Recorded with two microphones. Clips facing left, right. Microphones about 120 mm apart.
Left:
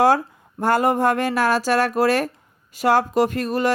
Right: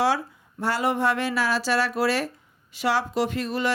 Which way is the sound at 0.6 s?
50° left (ahead or behind).